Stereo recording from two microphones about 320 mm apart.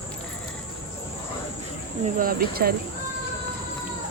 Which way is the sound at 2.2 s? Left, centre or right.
Right.